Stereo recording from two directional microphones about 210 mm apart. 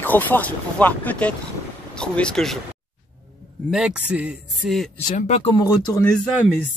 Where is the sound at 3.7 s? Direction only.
5° right (ahead or behind).